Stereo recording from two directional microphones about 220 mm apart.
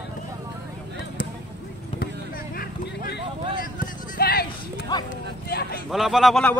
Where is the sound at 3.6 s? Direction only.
40° left (ahead or behind).